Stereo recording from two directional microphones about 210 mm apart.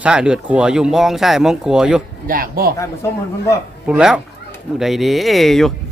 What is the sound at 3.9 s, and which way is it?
Speech, 5° right (ahead or behind).